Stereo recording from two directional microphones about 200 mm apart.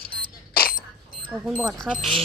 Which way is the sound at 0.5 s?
45° left (ahead or behind).